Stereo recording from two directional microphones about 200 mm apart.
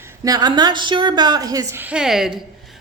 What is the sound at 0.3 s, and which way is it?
A woman's voice, 20° right (ahead or behind).